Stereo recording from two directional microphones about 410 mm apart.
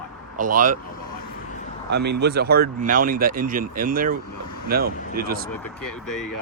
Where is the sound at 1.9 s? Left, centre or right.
Right.